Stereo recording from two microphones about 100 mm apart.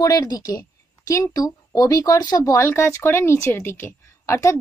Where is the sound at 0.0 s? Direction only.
40° left (ahead or behind).